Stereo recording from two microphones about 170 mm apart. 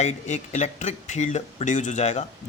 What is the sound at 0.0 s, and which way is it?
A man's voice, 40° left (ahead or behind).